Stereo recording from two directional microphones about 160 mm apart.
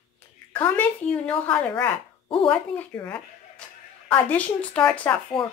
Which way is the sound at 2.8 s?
10° left (ahead or behind).